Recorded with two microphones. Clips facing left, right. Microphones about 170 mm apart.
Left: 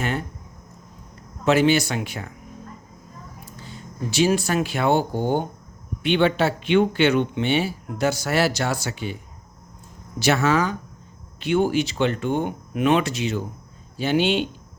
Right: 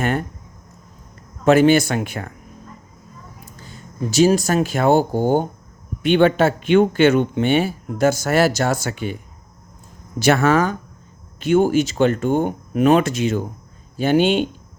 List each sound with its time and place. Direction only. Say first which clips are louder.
0.0 s speech: right 5 dB; 50° right (ahead or behind)
1.5 s speech: right 5 dB; 50° right (ahead or behind)
3.4 s speech: left 1 dB; 45° right (ahead or behind)
10.2 s speech: right 4 dB; 50° right (ahead or behind)